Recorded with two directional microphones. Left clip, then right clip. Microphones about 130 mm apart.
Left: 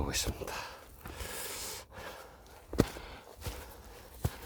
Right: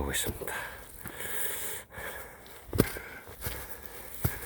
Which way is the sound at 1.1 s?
5° left (ahead or behind).